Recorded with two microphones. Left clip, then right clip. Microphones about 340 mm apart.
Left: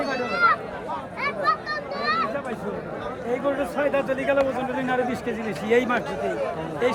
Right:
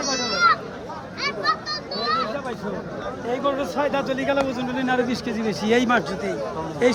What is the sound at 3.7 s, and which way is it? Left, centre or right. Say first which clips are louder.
A man's voice: even; right.